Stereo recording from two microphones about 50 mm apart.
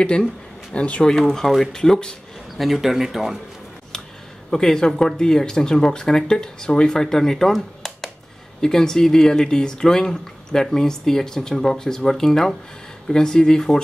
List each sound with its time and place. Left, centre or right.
0.7 s speech: left
1.0 s speech: centre
2.5 s speech: centre
4.5 s speech: centre
7.5 s a sound: centre
8.5 s speech: centre